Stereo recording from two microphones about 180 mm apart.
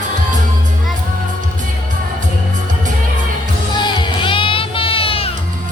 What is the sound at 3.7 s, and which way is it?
Music, 25° left (ahead or behind).